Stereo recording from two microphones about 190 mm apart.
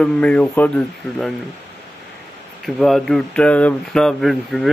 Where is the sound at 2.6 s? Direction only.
Centre (ahead or behind).